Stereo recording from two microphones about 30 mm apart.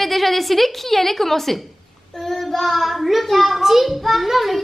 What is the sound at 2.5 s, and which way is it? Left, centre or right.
A child's voice, centre.